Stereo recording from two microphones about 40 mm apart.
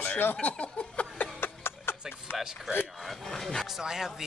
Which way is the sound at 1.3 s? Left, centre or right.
Left.